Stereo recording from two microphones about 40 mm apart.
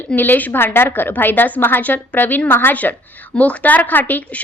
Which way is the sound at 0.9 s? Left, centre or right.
Left.